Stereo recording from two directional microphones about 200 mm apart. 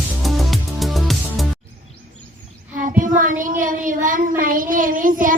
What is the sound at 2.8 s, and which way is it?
A child's voice, 40° right (ahead or behind).